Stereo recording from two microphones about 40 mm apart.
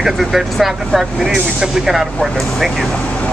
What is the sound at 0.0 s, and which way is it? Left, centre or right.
Speech, centre.